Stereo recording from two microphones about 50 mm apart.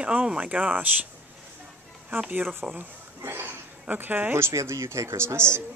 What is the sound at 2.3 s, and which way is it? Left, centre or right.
Speech, right.